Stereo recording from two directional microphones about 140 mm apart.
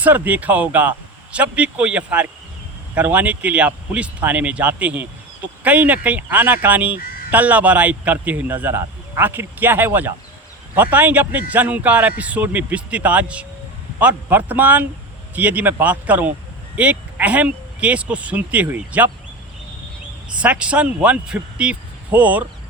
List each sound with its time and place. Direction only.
0.0 s speech: 10° right (ahead or behind)
20.4 s speech: 10° right (ahead or behind)